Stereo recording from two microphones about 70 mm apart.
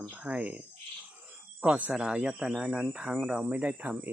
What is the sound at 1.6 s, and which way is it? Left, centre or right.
Speech, centre.